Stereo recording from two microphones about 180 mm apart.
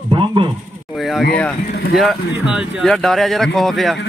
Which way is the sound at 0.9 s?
Centre (ahead or behind).